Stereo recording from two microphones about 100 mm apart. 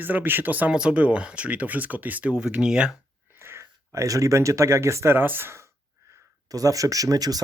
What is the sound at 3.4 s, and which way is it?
Speech, 25° right (ahead or behind).